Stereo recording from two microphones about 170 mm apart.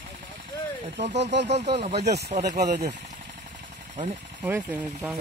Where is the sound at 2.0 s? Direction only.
80° right.